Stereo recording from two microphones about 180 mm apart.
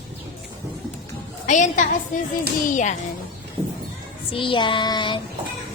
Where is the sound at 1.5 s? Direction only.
45° left (ahead or behind).